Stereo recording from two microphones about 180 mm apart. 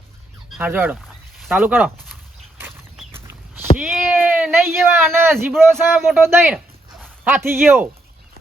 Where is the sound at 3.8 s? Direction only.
5° right (ahead or behind).